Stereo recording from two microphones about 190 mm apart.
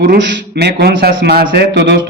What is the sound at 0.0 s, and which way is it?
A man's voice, 70° right (ahead or behind).